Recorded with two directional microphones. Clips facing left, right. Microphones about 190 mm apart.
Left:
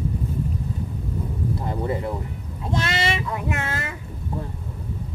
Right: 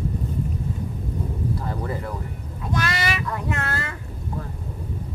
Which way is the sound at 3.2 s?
15° left (ahead or behind).